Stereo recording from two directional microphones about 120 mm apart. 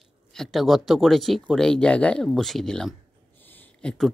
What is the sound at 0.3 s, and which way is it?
Speech, centre (ahead or behind).